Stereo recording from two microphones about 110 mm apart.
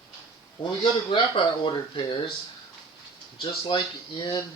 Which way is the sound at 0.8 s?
55° left (ahead or behind).